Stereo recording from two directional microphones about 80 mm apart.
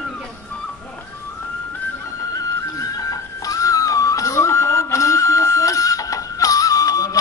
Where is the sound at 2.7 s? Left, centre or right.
Left.